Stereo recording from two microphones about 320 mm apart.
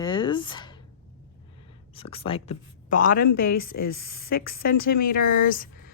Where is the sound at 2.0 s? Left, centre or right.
Centre.